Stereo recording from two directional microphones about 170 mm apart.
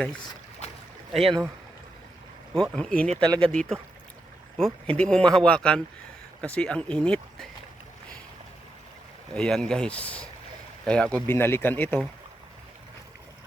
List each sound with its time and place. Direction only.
1.2 s speech: 30° right (ahead or behind)
2.6 s speech: 5° left (ahead or behind)
3.2 s speech: 20° right (ahead or behind)
3.5 s speech: 5° left (ahead or behind)
9.3 s speech: 5° left (ahead or behind)